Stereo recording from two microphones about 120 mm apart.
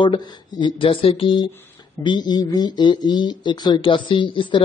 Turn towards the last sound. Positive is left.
turn(degrees=45)  # may be behind; listen again after turning